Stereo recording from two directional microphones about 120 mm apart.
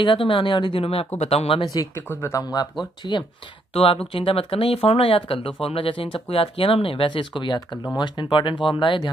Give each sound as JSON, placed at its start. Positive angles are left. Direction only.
{"t": 0.0, "sound": "speech", "side_deg": 45}
{"t": 1.6, "sound": "speech", "side_deg": 30}
{"t": 2.0, "sound": "speech", "side_deg": 20}
{"t": 3.0, "sound": "speech", "side_deg": 40}
{"t": 3.7, "sound": "speech", "side_deg": 50}